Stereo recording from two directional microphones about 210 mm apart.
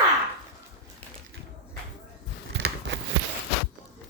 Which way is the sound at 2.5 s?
55° right (ahead or behind).